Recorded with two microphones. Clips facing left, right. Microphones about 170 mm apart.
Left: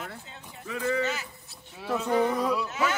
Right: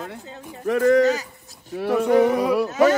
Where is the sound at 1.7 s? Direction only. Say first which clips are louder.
Right 8 dB; 65° right (ahead or behind).